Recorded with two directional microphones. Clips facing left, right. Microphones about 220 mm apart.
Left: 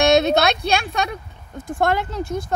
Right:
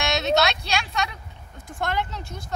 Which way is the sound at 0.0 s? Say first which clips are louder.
Left 7 dB; 55° left (ahead or behind).